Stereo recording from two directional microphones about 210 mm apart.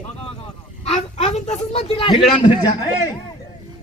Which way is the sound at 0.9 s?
30° left (ahead or behind).